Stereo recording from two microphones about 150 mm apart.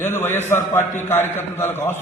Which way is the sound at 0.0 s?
15° left (ahead or behind).